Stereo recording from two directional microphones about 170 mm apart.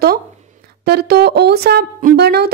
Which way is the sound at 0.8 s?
70° right (ahead or behind).